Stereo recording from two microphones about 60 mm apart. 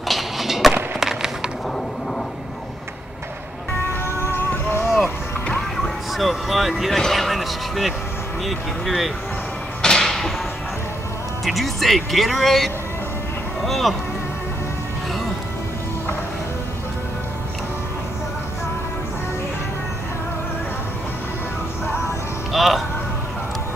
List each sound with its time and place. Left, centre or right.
0.1 s skateboard: centre
0.9 s a sound: centre
4.2 s music: left
5.8 s vehicle: centre
8.5 s speech: centre
9.8 s a sound: centre
11.4 s speech: centre
22.5 s music: centre